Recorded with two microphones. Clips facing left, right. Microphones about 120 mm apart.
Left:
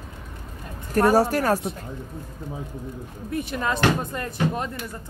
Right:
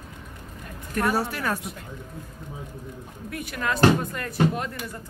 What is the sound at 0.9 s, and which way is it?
Speech, 40° left (ahead or behind).